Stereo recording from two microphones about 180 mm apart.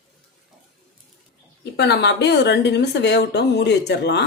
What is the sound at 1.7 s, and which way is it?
A woman's voice, 70° left (ahead or behind).